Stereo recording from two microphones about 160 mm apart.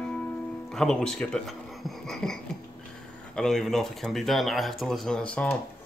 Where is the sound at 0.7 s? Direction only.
5° left (ahead or behind).